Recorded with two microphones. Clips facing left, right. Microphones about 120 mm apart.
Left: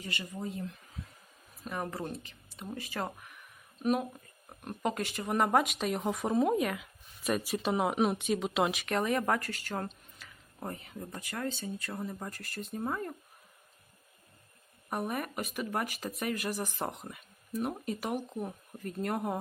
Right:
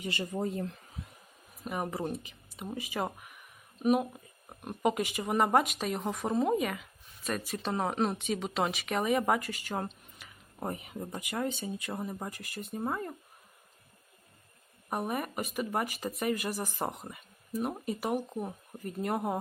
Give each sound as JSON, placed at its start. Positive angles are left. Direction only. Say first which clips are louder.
{"t": 0.1, "sound": "speech", "louder": "right 5 dB", "side_deg": -40}
{"t": 1.6, "sound": "speech", "louder": "right 3 dB", "side_deg": -10}
{"t": 14.8, "sound": "speech", "louder": "right 1 dB", "side_deg": -5}